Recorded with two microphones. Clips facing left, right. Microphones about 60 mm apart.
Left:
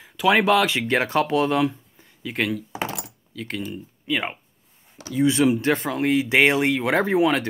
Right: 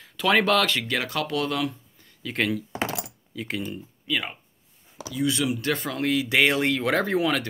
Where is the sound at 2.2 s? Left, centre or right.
Centre.